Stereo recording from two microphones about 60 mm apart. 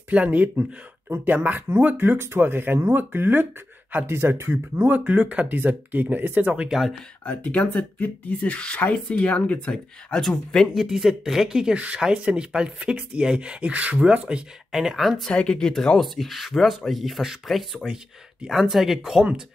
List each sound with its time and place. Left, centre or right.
0.1 s speech: right
4.8 s speech: right
6.5 s speech: centre
7.2 s speech: left
10.7 s speech: centre
14.7 s speech: centre
15.2 s speech: centre